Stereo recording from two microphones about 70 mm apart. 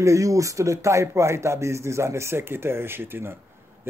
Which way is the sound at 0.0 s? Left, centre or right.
Right.